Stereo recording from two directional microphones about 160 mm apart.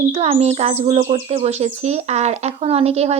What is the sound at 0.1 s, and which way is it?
Speech, 40° right (ahead or behind).